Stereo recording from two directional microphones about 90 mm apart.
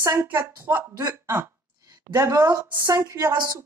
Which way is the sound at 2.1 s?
40° right (ahead or behind).